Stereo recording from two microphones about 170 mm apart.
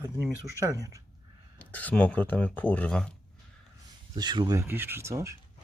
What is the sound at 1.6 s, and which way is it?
Speech, 10° left (ahead or behind).